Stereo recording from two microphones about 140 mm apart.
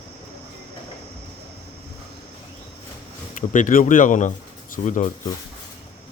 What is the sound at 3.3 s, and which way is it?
Speech, 70° left (ahead or behind).